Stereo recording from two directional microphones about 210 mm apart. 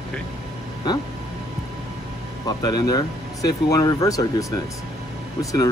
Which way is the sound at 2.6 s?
15° left (ahead or behind).